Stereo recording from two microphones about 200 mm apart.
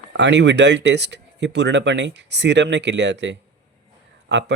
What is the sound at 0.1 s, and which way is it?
Speech, 60° right (ahead or behind).